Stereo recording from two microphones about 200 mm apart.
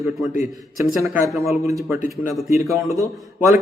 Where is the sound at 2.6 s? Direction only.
15° right (ahead or behind).